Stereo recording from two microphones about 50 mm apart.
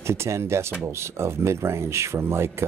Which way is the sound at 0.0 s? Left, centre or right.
Right.